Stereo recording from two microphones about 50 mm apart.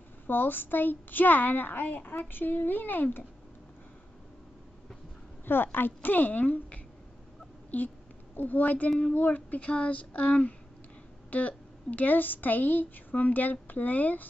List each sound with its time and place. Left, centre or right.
0.3 s a woman's voice: left
5.4 s a woman's voice: left
9.0 s female singing: left
11.2 s a woman's voice: left